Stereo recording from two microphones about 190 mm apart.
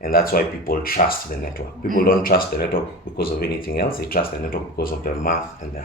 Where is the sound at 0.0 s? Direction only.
50° left (ahead or behind).